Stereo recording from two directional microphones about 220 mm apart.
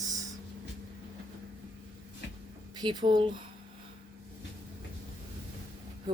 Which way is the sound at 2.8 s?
20° right (ahead or behind).